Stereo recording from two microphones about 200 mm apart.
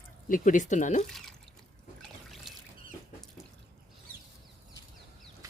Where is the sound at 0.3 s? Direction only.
40° left (ahead or behind).